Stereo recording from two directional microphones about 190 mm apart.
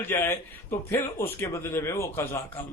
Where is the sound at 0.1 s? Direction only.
15° left (ahead or behind).